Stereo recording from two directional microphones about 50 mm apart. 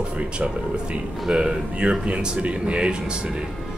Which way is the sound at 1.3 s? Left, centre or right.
Centre.